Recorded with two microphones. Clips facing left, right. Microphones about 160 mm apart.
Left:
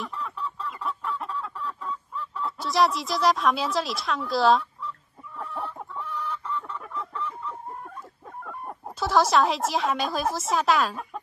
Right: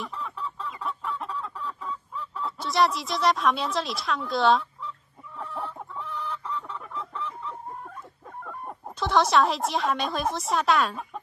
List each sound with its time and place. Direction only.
0.0 s chicken: centre (ahead or behind)
8.5 s speech: centre (ahead or behind)